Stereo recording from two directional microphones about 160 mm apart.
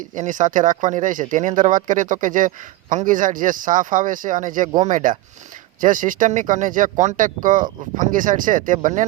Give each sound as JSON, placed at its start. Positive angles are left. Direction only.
{"t": 0.0, "sound": "speech", "side_deg": -55}